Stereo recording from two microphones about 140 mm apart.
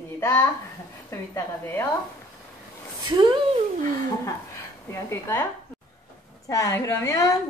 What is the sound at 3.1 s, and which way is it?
Speech, 35° right (ahead or behind).